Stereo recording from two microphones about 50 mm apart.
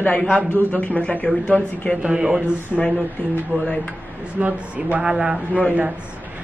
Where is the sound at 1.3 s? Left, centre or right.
Centre.